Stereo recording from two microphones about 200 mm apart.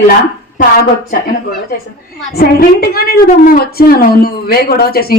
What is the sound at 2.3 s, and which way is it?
A woman's voice, 50° left (ahead or behind).